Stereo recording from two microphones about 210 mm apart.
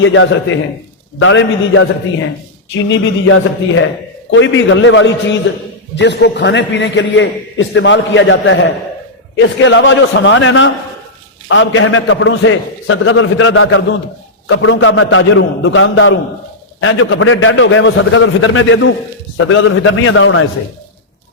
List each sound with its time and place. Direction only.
0.0 s a man's voice: 65° left (ahead or behind)
2.9 s a man's voice: 70° left (ahead or behind)